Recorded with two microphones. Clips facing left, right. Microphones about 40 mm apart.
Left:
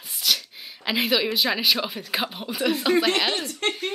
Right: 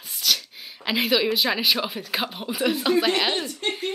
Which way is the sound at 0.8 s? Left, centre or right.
Centre.